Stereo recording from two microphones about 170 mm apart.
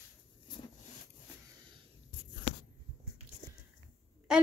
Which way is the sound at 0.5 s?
25° left (ahead or behind).